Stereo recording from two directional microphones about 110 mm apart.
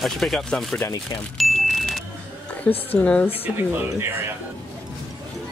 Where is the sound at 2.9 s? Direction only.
15° left (ahead or behind).